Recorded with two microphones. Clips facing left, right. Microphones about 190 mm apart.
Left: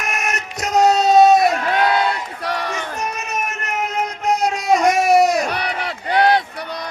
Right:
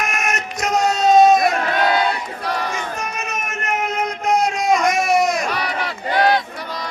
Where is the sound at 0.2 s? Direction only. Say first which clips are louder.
Right 2 dB; 35° left (ahead or behind).